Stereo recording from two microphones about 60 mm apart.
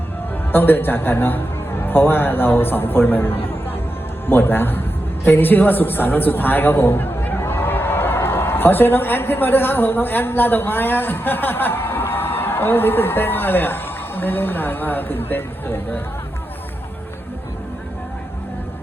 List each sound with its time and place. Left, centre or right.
0.5 s a man's voice: left